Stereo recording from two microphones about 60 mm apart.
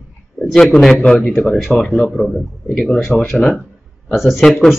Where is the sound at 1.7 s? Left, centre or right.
Centre.